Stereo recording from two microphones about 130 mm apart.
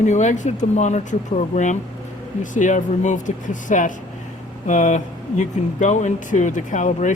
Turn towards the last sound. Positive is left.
turn(degrees=70)  # may be behind; listen again after turning